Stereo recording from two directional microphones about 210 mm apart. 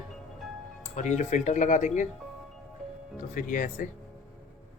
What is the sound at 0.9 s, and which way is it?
Speech, 35° left (ahead or behind).